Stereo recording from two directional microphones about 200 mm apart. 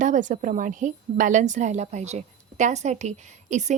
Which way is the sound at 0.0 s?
40° right (ahead or behind).